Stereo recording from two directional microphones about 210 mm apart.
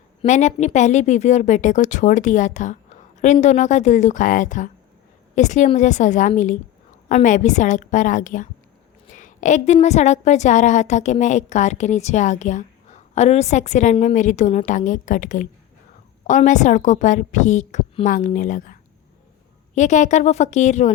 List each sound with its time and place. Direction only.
0.2 s a woman's voice: 35° left (ahead or behind)